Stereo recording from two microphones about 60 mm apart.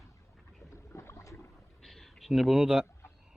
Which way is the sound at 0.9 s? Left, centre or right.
Left.